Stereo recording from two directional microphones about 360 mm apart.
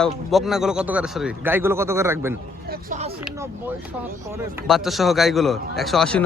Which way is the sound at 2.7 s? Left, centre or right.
Right.